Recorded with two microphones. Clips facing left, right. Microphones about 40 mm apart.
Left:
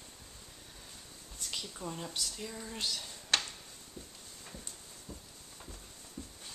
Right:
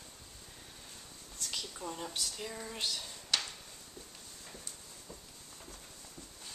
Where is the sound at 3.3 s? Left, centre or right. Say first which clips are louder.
Left 3 dB; left.